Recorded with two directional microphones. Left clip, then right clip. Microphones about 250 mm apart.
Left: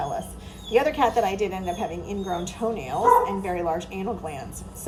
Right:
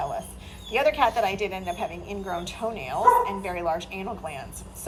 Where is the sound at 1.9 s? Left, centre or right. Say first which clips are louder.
Left 3 dB; left.